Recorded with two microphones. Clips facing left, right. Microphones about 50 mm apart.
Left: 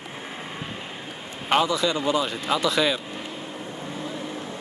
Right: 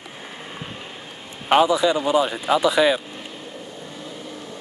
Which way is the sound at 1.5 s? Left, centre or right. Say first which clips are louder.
Right 5 dB; centre.